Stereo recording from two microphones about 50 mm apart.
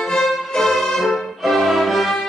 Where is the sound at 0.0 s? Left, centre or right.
Centre.